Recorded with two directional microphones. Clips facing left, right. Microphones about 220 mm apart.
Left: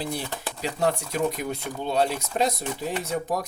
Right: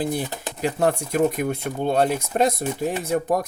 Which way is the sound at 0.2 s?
20° right (ahead or behind).